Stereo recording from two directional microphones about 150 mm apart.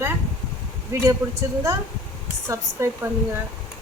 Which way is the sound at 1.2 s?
20° right (ahead or behind).